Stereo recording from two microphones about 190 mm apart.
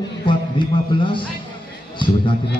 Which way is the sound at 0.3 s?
25° left (ahead or behind).